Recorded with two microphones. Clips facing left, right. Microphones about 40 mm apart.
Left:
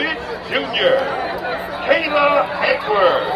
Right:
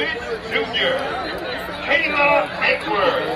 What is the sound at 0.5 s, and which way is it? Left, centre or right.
Speech, left.